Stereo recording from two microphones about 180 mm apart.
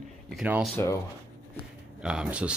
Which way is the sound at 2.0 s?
5° right (ahead or behind).